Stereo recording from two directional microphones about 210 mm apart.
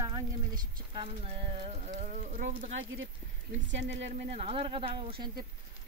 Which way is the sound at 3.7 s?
60° right (ahead or behind).